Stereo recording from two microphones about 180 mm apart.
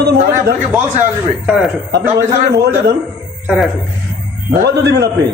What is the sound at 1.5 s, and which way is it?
Speech, centre (ahead or behind).